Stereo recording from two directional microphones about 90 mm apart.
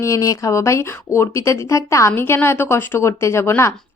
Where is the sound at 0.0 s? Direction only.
35° left (ahead or behind).